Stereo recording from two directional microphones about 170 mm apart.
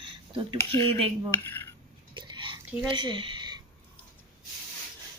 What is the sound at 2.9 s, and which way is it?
Speech, 30° right (ahead or behind).